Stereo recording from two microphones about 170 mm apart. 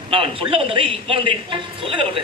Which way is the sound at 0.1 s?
30° right (ahead or behind).